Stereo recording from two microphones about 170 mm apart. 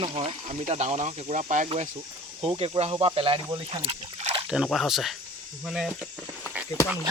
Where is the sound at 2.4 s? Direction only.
35° right (ahead or behind).